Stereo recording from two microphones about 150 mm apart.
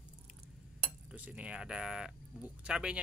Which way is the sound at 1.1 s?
10° right (ahead or behind).